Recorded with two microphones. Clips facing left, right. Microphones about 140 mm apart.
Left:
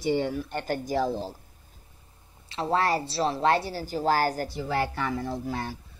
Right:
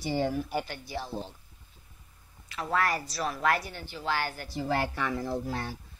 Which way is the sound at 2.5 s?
30° left (ahead or behind).